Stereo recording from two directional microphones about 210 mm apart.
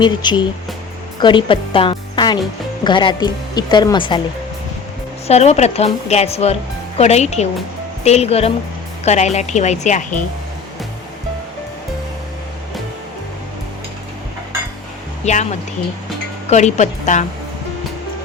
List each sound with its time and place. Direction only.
0.0 s a woman's voice: 20° left (ahead or behind)
5.3 s speech: 30° left (ahead or behind)
15.2 s speech: 35° left (ahead or behind)